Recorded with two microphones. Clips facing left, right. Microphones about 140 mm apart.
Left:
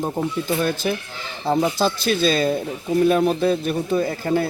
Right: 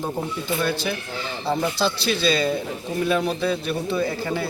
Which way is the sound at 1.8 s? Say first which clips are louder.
Left 3 dB; 45° left (ahead or behind).